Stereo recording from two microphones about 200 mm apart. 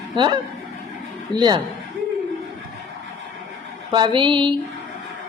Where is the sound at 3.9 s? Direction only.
25° right (ahead or behind).